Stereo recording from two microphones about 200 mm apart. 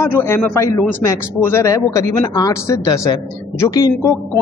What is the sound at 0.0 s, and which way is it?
A man's voice, 10° left (ahead or behind).